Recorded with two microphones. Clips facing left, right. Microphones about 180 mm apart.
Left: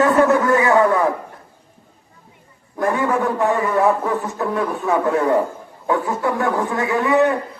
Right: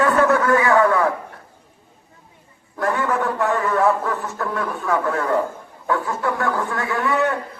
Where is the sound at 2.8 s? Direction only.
15° left (ahead or behind).